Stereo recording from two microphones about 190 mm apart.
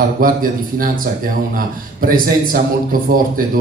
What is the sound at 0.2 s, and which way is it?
Speech, 50° right (ahead or behind).